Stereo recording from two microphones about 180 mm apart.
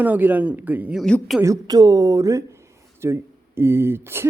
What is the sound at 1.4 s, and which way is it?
Speech, 20° right (ahead or behind).